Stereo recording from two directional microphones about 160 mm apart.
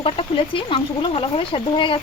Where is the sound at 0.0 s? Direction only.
35° left (ahead or behind).